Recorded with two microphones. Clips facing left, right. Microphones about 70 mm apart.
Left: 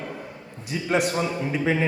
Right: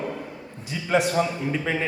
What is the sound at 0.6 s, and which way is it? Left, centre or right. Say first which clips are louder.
A man's voice: right 1 dB; centre.